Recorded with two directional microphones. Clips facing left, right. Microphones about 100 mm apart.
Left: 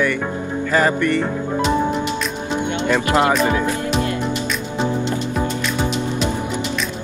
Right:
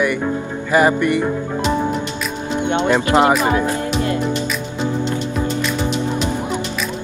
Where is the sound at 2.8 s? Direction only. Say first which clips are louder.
Right 2 dB; 25° right (ahead or behind).